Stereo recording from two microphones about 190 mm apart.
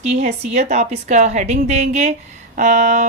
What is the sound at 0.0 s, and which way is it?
A woman's voice, 35° right (ahead or behind).